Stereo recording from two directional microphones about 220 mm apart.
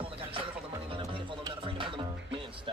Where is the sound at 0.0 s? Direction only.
25° right (ahead or behind).